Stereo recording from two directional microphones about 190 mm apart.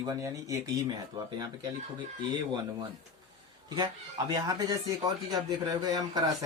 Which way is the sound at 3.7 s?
20° right (ahead or behind).